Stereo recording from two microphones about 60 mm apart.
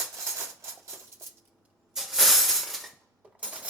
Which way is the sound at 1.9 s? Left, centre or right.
Centre.